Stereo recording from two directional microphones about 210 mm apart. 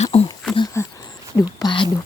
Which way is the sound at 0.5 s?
15° left (ahead or behind).